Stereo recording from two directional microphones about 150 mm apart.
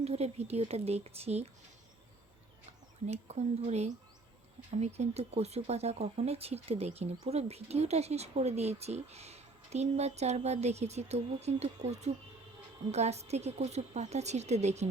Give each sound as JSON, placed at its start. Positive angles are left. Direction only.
{"t": 0.0, "sound": "speech", "side_deg": -45}
{"t": 3.1, "sound": "speech", "side_deg": -50}